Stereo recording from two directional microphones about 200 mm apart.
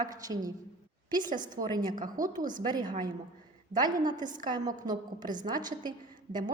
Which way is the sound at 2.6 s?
20° right (ahead or behind).